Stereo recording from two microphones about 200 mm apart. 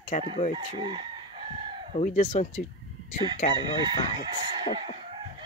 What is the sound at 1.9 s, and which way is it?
Speech, 35° left (ahead or behind).